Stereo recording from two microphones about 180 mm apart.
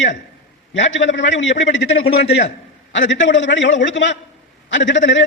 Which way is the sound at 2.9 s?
90° left.